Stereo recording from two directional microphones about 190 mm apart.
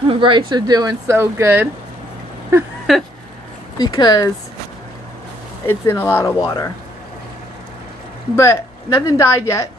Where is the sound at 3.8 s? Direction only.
20° left (ahead or behind).